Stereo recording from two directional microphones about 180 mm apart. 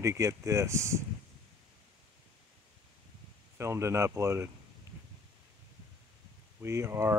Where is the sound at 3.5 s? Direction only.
15° right (ahead or behind).